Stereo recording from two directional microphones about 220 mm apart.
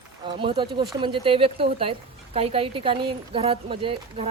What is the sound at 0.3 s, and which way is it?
Speech, 20° right (ahead or behind).